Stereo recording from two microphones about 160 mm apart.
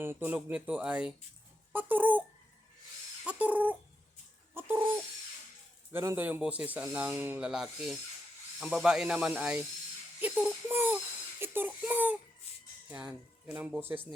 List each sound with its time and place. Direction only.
0.0 s speech: 15° right (ahead or behind)
3.2 s speech: 10° right (ahead or behind)
4.5 s bird: 15° right (ahead or behind)
5.9 s speech: 15° right (ahead or behind)
12.4 s a sound: 40° left (ahead or behind)
12.9 s speech: 10° right (ahead or behind)